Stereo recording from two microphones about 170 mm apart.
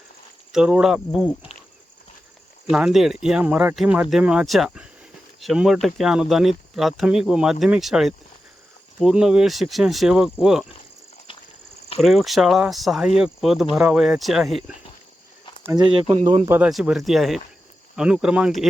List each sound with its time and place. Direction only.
0.5 s speech: 5° right (ahead or behind)
2.6 s speech: 5° right (ahead or behind)
11.3 s a sound: 30° left (ahead or behind)
11.9 s speech: centre (ahead or behind)
15.7 s speech: 35° right (ahead or behind)
16.5 s speech: 5° right (ahead or behind)